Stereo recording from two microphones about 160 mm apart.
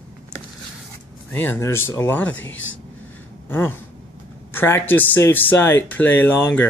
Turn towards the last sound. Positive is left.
turn(degrees=10)  # may be behind; listen again after turning